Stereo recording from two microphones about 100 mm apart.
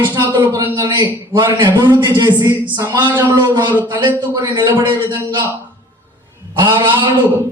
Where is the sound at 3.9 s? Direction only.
45° right (ahead or behind).